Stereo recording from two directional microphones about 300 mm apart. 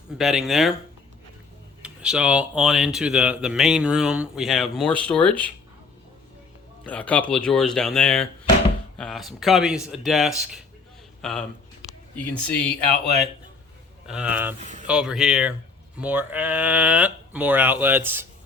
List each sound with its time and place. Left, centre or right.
0.2 s speech: centre
1.8 s speech: centre
6.8 s speech: centre
14.1 s speech: centre
14.6 s speech: right
14.8 s speech: centre